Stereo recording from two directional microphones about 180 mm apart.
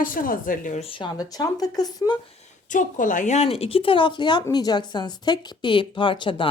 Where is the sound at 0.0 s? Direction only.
50° left (ahead or behind); by 2.1 s 20° left (ahead or behind).